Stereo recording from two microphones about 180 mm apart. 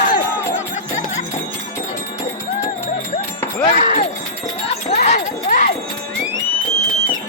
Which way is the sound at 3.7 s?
45° left (ahead or behind).